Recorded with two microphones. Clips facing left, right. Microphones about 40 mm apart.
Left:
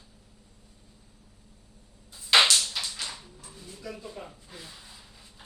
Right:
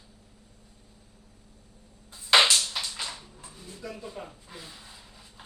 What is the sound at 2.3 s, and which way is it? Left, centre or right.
Music, centre.